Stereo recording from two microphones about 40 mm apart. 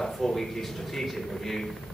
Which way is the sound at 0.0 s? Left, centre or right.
Centre.